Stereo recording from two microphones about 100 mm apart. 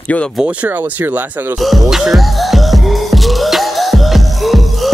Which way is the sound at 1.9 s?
Centre (ahead or behind).